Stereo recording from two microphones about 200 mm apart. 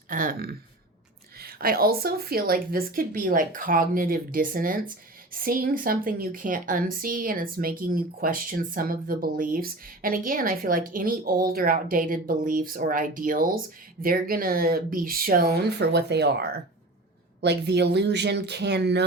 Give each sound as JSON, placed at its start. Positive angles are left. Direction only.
{"t": 0.1, "sound": "a woman's voice", "side_deg": -45}